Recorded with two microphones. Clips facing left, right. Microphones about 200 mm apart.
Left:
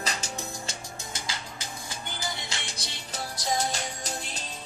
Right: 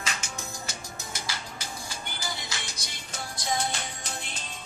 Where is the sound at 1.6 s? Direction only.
20° left (ahead or behind).